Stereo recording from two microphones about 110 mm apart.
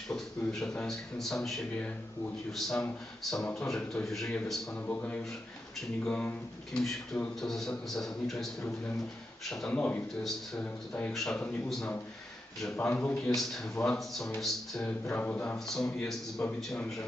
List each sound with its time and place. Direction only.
0.1 s a man's voice: 5° left (ahead or behind)
4.8 s a man's voice: 15° left (ahead or behind)
9.5 s speech: 5° left (ahead or behind)
12.7 s speech: 20° left (ahead or behind)
13.2 s a man's voice: centre (ahead or behind)
14.9 s a man's voice: 15° left (ahead or behind)